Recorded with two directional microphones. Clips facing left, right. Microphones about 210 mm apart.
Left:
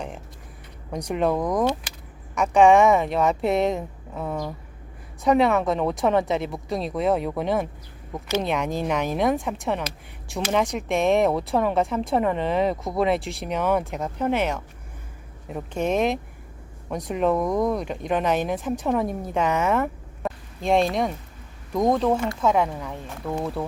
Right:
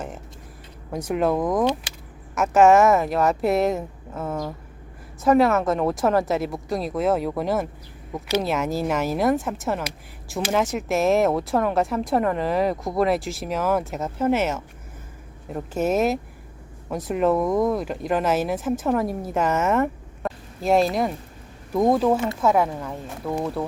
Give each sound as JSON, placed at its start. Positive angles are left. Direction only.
{"t": 0.9, "sound": "speech", "side_deg": 0}
{"t": 19.8, "sound": "a sound", "side_deg": 0}
{"t": 21.7, "sound": "speech", "side_deg": -5}